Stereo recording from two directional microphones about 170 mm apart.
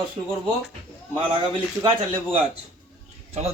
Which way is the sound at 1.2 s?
30° right (ahead or behind).